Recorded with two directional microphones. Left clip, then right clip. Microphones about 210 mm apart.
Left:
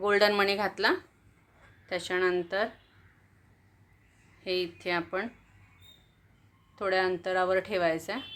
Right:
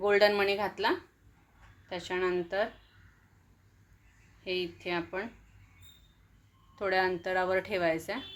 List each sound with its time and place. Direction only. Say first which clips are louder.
0.0 s speech: left 1 dB; 15° left (ahead or behind)
4.4 s speech: left 3 dB; 20° left (ahead or behind)
6.7 s speech: left 1 dB; 10° left (ahead or behind)